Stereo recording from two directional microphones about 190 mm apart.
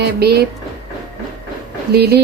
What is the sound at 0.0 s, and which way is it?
Speech, 60° right (ahead or behind).